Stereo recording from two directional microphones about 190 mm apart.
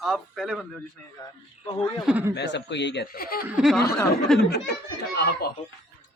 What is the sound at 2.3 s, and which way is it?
Speech, 65° left (ahead or behind).